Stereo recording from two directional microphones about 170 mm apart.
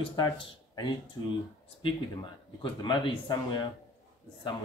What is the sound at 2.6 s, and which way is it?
Speech, 25° left (ahead or behind).